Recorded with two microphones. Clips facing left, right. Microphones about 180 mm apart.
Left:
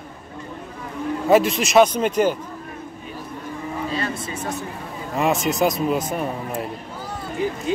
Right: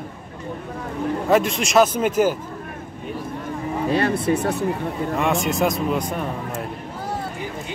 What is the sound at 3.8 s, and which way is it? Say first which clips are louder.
Speech: right 10 dB; 60° right (ahead or behind).